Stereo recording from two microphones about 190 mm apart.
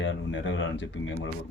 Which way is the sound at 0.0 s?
80° left.